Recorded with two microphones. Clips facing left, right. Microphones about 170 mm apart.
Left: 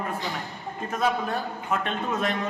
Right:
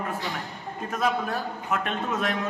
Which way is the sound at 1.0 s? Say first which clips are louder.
Left 1 dB; centre (ahead or behind).